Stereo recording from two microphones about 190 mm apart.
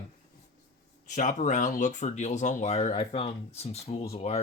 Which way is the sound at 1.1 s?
40° left (ahead or behind).